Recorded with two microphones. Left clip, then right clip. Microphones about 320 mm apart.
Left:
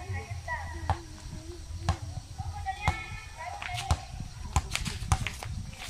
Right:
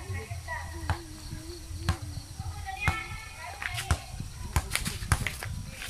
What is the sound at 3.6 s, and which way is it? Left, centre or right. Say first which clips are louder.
Walk: right 3 dB; centre.